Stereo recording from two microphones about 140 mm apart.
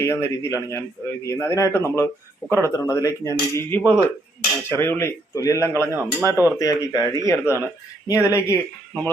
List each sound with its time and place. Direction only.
0.0 s a man's voice: 20° left (ahead or behind)
5.9 s speech: 10° right (ahead or behind)
6.6 s a man's voice: 25° left (ahead or behind)